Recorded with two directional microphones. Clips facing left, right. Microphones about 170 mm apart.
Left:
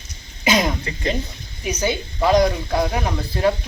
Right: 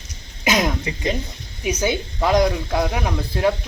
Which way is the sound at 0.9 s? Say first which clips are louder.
Even; 15° right (ahead or behind).